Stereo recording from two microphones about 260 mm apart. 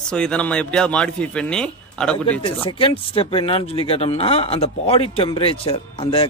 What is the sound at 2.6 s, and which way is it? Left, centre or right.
Speech, centre.